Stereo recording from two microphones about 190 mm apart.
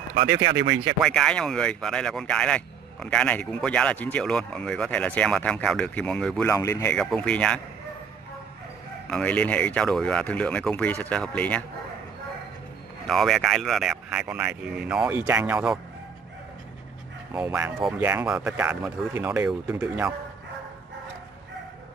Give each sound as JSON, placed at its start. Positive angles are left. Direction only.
{"t": 0.1, "sound": "speech", "side_deg": -70}
{"t": 1.0, "sound": "speech", "side_deg": 5}
{"t": 6.5, "sound": "speech", "side_deg": 15}
{"t": 7.0, "sound": "speech", "side_deg": 5}
{"t": 9.1, "sound": "speech", "side_deg": 5}
{"t": 13.0, "sound": "speech", "side_deg": 0}
{"t": 17.3, "sound": "speech", "side_deg": -10}